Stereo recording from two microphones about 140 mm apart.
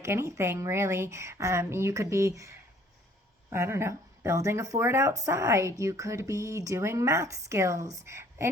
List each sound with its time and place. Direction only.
0.0 s speech: 20° right (ahead or behind)